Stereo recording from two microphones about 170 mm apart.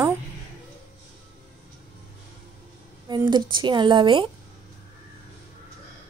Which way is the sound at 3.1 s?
25° right (ahead or behind).